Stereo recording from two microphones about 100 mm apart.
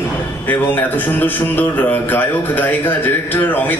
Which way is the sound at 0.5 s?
20° left (ahead or behind).